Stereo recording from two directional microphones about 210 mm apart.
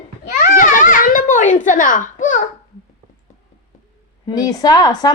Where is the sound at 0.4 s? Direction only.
40° left (ahead or behind).